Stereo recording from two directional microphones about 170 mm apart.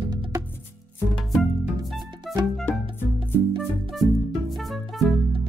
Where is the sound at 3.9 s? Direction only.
Centre (ahead or behind).